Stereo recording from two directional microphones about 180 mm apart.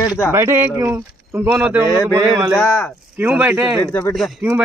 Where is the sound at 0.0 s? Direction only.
20° left (ahead or behind).